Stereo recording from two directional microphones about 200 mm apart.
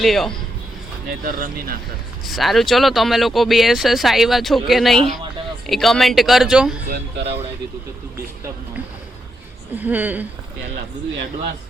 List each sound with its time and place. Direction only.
0.0 s speech: centre (ahead or behind)
1.2 s speech: 45° right (ahead or behind)
2.2 s speech: centre (ahead or behind)
6.9 s speech: 55° right (ahead or behind)
9.7 s speech: 10° right (ahead or behind)